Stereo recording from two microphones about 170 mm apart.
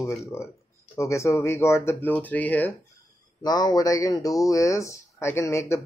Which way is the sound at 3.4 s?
25° left (ahead or behind).